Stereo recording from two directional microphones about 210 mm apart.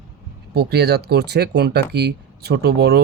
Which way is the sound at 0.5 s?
50° right (ahead or behind).